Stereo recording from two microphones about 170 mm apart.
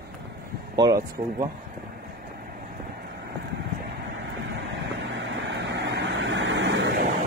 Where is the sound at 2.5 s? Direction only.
65° right (ahead or behind).